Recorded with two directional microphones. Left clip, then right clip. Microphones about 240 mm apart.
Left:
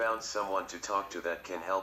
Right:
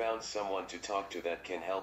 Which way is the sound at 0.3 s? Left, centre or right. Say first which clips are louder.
Left 3 dB; centre.